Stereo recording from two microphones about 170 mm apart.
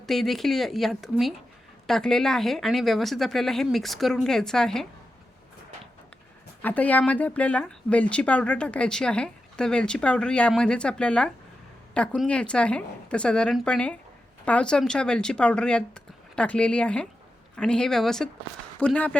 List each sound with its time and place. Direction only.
0.0 s speech: centre (ahead or behind)
6.6 s speech: 10° left (ahead or behind)